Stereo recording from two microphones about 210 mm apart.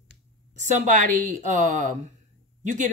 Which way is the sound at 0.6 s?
35° right (ahead or behind).